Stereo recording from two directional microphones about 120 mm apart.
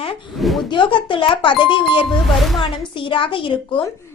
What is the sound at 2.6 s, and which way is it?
A woman's voice, 45° left (ahead or behind).